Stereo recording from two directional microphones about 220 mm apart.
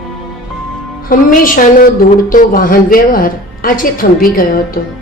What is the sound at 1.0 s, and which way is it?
A woman's voice, 40° left (ahead or behind).